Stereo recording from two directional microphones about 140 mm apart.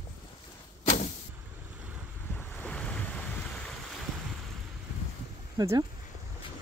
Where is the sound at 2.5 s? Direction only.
10° left (ahead or behind).